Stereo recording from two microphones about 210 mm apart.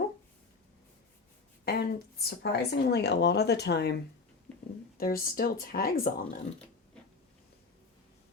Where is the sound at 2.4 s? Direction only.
55° left (ahead or behind).